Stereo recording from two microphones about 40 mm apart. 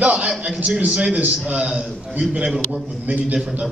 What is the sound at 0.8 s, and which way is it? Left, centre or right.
Speech, centre.